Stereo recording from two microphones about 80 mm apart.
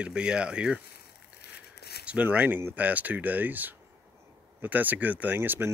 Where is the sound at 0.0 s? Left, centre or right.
Centre.